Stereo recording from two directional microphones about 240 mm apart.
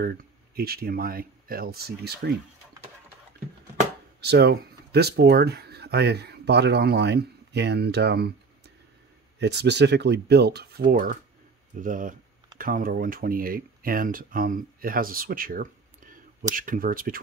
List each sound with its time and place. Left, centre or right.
0.0 s speech: right
4.2 s speech: right